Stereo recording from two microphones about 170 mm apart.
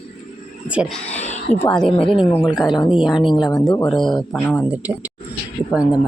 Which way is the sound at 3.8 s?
Centre (ahead or behind).